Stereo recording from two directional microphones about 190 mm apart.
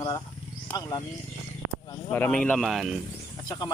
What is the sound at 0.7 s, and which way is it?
Speech, 15° left (ahead or behind).